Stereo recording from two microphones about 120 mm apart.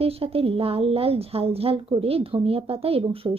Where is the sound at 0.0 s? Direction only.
55° right (ahead or behind).